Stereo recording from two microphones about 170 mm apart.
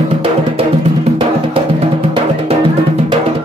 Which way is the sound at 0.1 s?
35° right (ahead or behind).